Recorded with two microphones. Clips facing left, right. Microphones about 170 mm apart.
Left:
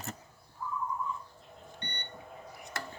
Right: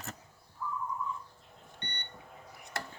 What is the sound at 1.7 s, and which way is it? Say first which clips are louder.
Beep: left 1 dB; 10° left (ahead or behind).